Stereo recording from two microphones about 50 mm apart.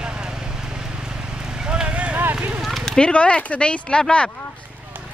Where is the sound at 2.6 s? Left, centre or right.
Centre.